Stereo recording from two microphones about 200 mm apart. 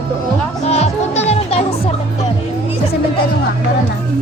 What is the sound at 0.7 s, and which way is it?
Music, 30° left (ahead or behind).